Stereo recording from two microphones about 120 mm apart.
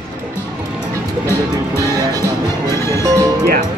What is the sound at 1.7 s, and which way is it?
Music, 30° right (ahead or behind).